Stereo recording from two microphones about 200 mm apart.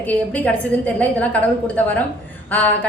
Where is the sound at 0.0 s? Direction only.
10° left (ahead or behind).